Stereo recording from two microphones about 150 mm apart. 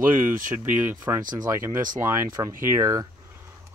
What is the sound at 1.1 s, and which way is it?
Speech, 25° right (ahead or behind).